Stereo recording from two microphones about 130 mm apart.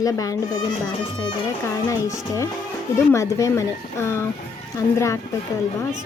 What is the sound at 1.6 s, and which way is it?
A woman's voice, 25° left (ahead or behind).